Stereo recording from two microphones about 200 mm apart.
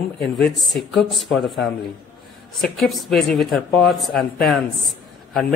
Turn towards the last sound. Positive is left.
turn(degrees=0)  # may be behind; listen again after turning